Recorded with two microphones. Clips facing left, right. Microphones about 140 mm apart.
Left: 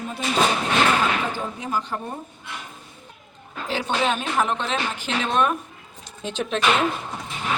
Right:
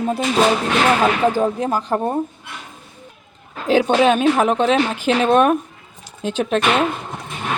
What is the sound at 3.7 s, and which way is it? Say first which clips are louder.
Speech: right 10 dB; 55° right (ahead or behind).